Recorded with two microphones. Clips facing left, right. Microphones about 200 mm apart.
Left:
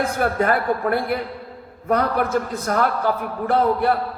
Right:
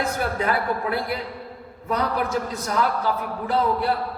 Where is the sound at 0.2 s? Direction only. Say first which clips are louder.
Left 4 dB; 50° left (ahead or behind).